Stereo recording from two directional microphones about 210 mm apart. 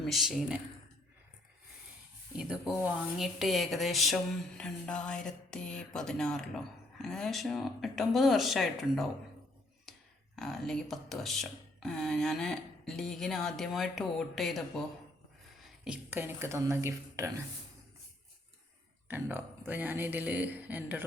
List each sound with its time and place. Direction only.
0.0 s speech: centre (ahead or behind)
2.4 s speech: 5° right (ahead or behind)
10.3 s speech: centre (ahead or behind)
15.6 s speech: 5° right (ahead or behind)
19.0 s speech: 10° right (ahead or behind)